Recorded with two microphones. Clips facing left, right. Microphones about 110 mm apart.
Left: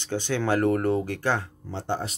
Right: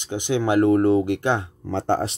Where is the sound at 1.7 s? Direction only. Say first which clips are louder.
Right 8 dB; 90° right.